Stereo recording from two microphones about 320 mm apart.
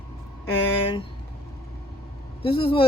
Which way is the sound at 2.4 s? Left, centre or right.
Centre.